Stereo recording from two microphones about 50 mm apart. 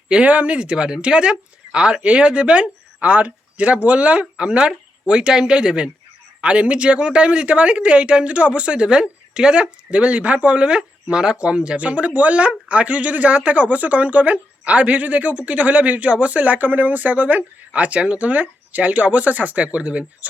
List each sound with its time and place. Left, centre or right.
0.1 s a man's voice: right